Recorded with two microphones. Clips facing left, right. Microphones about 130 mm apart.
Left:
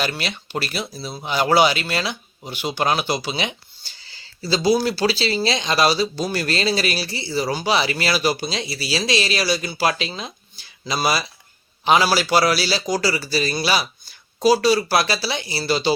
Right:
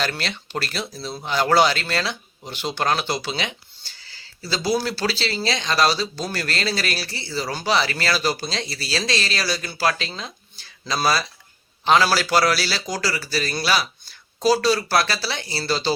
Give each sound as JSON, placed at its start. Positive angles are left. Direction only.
{"t": 0.0, "sound": "speech", "side_deg": 10}